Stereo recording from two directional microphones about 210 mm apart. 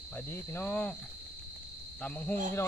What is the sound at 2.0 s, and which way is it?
Cricket, 5° left (ahead or behind).